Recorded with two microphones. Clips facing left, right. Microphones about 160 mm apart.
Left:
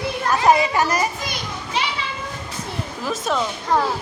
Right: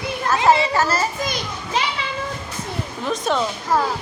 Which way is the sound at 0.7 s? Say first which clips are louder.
Even; 15° left (ahead or behind).